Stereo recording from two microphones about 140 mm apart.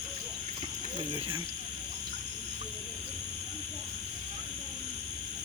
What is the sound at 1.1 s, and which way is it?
Speech, 35° right (ahead or behind).